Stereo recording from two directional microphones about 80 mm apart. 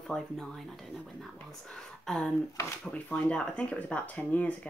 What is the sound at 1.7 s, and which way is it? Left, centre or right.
Speech, centre.